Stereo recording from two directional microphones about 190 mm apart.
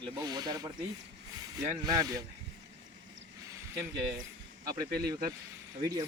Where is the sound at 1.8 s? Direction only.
20° right (ahead or behind).